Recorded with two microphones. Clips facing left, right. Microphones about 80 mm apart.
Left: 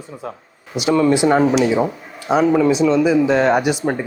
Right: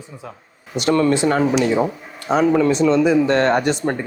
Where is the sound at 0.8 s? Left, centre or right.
Centre.